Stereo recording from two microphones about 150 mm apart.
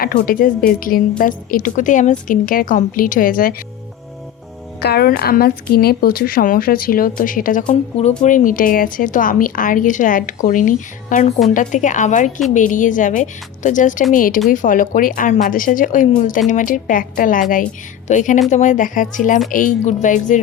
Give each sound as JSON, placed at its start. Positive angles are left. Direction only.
{"t": 0.0, "sound": "a woman's voice", "side_deg": 70}
{"t": 4.8, "sound": "a woman's voice", "side_deg": 90}